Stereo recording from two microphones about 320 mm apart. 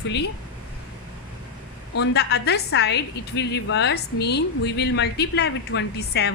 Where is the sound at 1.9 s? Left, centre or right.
Left.